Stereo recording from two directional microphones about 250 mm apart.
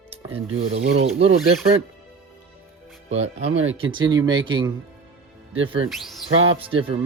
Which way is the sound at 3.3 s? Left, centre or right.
Right.